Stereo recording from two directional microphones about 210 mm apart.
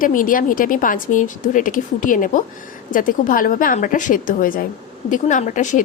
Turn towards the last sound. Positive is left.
turn(degrees=35)  # may be behind; listen again after turning